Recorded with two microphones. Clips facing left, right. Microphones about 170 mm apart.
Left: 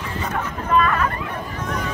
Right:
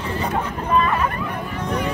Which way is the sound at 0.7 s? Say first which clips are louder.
Left 1 dB; 20° right (ahead or behind).